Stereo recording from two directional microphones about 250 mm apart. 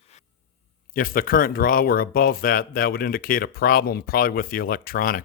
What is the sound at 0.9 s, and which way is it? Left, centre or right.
Speech, left.